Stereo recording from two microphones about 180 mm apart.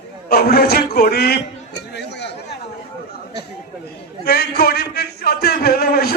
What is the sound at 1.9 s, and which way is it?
Chatter, 70° left (ahead or behind).